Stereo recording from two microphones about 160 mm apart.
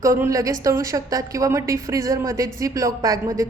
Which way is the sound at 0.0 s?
20° right (ahead or behind).